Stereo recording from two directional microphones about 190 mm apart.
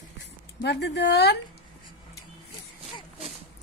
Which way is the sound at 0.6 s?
65° left (ahead or behind).